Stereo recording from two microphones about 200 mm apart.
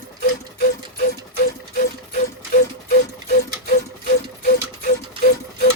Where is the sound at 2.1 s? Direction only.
45° left (ahead or behind).